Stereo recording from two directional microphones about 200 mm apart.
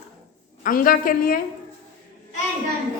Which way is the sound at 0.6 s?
45° left (ahead or behind).